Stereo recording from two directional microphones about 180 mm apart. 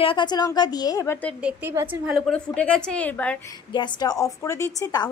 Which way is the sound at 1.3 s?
10° right (ahead or behind).